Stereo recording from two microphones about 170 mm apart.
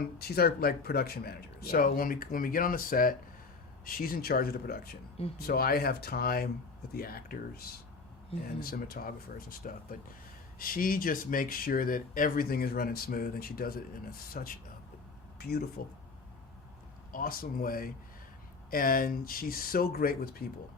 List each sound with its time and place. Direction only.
0.0 s speech: 65° left (ahead or behind)
15.4 s speech: 70° left (ahead or behind)
17.1 s speech: 55° left (ahead or behind)